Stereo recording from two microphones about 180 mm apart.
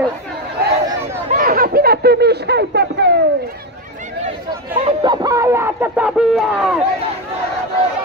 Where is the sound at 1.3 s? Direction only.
50° right (ahead or behind); by 3.1 s 70° right (ahead or behind).